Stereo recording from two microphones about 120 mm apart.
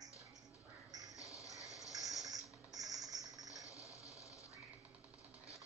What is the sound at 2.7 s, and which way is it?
Music, 30° right (ahead or behind).